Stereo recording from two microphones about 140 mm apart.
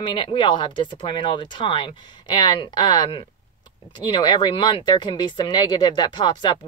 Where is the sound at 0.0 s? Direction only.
35° left (ahead or behind).